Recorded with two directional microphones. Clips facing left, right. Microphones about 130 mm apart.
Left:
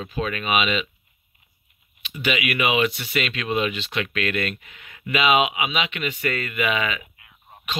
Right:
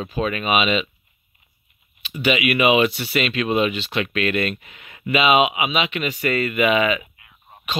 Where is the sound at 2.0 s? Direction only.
30° right (ahead or behind).